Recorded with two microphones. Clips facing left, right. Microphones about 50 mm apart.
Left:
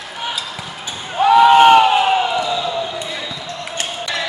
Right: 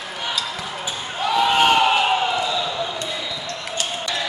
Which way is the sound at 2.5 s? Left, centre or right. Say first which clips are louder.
Left 3 dB; centre.